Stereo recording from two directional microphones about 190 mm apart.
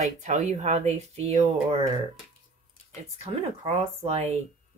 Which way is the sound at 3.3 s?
25° right (ahead or behind).